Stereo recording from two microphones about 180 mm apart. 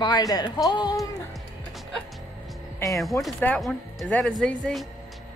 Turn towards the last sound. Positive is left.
turn(degrees=5)  # may be behind; listen again after turning